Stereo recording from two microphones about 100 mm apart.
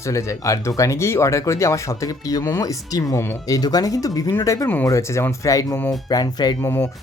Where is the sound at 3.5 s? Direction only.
40° left (ahead or behind).